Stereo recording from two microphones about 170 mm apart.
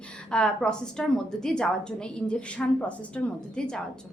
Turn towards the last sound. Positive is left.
turn(degrees=5)  # may be behind; listen again after turning